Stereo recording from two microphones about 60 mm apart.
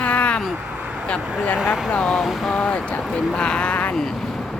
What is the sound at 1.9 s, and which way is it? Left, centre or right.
Speech, centre.